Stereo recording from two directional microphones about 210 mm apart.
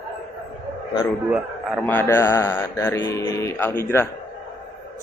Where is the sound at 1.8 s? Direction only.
10° left (ahead or behind).